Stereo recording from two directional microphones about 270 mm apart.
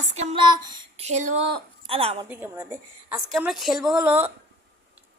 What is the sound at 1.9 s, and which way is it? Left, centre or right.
Speech, right.